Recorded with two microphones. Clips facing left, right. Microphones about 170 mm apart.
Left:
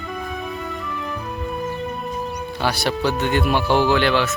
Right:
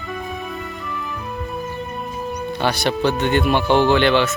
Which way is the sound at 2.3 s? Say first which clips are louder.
Right 4 dB; 5° left (ahead or behind).